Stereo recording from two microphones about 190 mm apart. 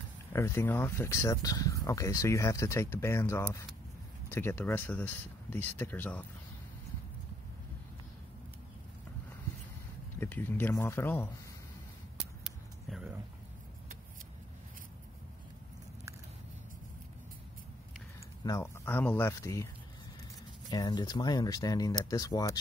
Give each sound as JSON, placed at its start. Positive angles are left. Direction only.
{"t": 0.3, "sound": "speech", "side_deg": 15}
{"t": 10.2, "sound": "speech", "side_deg": 10}
{"t": 12.4, "sound": "a sound", "side_deg": 0}
{"t": 18.4, "sound": "speech", "side_deg": 15}
{"t": 20.7, "sound": "speech", "side_deg": 20}